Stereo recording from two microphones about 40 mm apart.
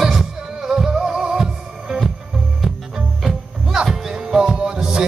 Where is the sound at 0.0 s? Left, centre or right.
Centre.